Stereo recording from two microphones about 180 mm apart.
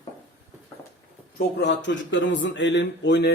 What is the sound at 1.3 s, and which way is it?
Speech, 75° left (ahead or behind).